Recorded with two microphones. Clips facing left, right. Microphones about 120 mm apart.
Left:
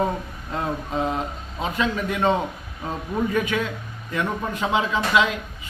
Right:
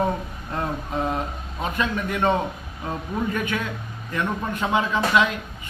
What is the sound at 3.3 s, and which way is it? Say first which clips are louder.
Speech: left 3 dB; 15° left (ahead or behind).